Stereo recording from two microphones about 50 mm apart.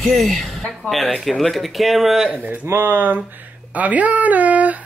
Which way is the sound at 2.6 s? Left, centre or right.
Right.